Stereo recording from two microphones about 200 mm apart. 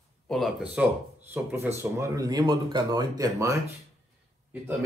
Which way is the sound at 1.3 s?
10° right (ahead or behind).